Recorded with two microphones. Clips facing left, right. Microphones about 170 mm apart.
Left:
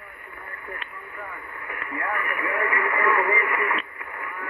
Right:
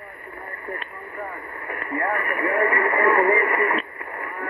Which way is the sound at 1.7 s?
40° right (ahead or behind).